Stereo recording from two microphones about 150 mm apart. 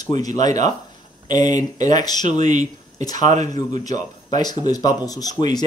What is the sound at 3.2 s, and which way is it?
Speech, 50° right (ahead or behind).